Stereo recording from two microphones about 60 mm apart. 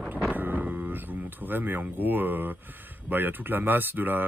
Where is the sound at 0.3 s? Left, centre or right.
Right.